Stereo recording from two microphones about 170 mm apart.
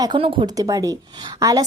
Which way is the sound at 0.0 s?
30° right (ahead or behind).